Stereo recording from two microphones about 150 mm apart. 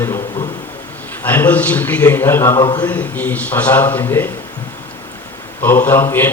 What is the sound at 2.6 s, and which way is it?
Speech, 30° left (ahead or behind).